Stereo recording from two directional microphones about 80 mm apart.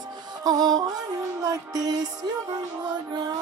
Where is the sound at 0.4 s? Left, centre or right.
Right.